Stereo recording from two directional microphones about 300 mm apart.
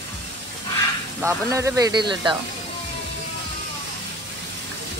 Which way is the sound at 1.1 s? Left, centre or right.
Centre.